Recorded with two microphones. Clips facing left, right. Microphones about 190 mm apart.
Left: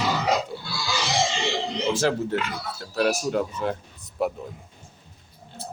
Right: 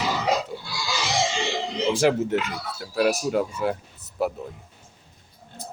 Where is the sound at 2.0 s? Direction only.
15° right (ahead or behind).